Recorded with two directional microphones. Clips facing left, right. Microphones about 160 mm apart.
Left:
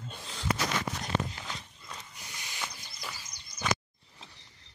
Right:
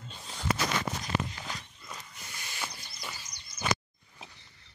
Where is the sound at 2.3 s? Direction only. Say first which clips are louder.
Right 1 dB; 15° left (ahead or behind).